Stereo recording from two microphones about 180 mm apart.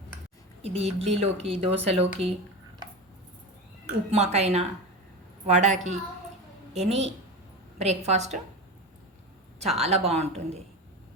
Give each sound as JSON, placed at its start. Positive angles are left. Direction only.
{"t": 0.6, "sound": "speech", "side_deg": -35}
{"t": 4.1, "sound": "speech", "side_deg": -40}
{"t": 9.7, "sound": "speech", "side_deg": -35}